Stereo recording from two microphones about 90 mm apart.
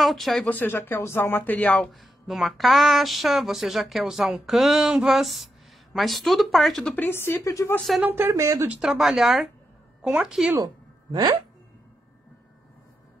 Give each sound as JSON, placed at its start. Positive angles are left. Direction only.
{"t": 0.0, "sound": "speech", "side_deg": 0}
{"t": 0.5, "sound": "speech", "side_deg": 20}
{"t": 1.9, "sound": "speech", "side_deg": 0}
{"t": 7.0, "sound": "speech", "side_deg": 25}
{"t": 8.0, "sound": "speech", "side_deg": -25}
{"t": 8.6, "sound": "speech", "side_deg": -10}
{"t": 11.1, "sound": "speech", "side_deg": -55}